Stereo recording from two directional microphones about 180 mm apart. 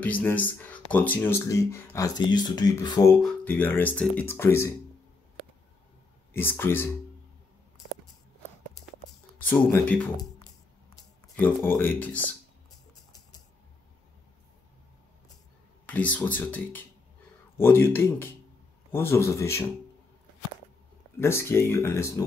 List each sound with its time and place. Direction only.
0.0 s speech: 10° left (ahead or behind)
3.2 s speech: 5° left (ahead or behind)
6.3 s speech: 10° left (ahead or behind)
9.4 s speech: 10° left (ahead or behind)
11.3 s speech: 10° left (ahead or behind)
15.9 s speech: 10° left (ahead or behind)
21.2 s speech: 15° left (ahead or behind)